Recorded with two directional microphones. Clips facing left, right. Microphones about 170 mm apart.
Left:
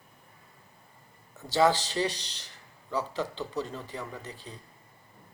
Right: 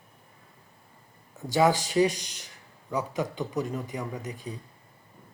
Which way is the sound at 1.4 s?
15° right (ahead or behind).